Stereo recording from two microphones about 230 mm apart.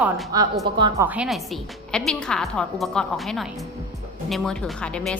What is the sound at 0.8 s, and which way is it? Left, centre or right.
Speech, centre.